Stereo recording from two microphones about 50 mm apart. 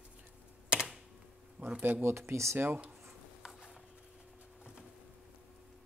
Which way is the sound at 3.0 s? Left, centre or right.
Centre.